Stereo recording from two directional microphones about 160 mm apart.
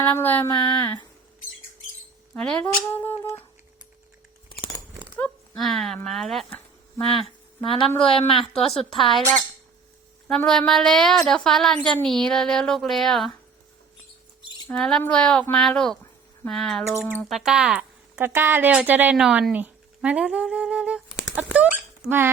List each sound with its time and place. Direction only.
0.0 s speech: 10° left (ahead or behind)
0.8 s speech: 25° left (ahead or behind)
2.3 s speech: 5° left (ahead or behind)
4.4 s a sound: 30° left (ahead or behind)
5.1 s a woman's voice: 5° left (ahead or behind)
8.5 s a woman's voice: 40° left (ahead or behind)
8.8 s a woman's voice: centre (ahead or behind)
10.2 s a woman's voice: 5° left (ahead or behind)
14.7 s a woman's voice: 5° left (ahead or behind)